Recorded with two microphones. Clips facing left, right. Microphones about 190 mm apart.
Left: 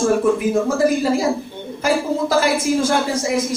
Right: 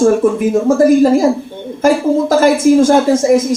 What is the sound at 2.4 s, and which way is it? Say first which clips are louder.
A woman's voice: right 9 dB; 45° right (ahead or behind).